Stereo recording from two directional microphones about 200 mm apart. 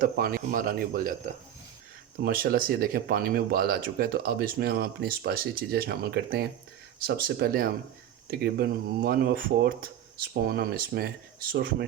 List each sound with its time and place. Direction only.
0.0 s speech: 45° right (ahead or behind)
2.2 s speech: 50° right (ahead or behind)